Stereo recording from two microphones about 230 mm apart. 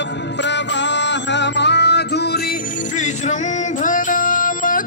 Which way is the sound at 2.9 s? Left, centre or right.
Left.